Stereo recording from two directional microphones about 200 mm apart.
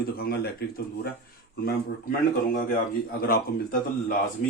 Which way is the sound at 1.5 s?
50° left (ahead or behind).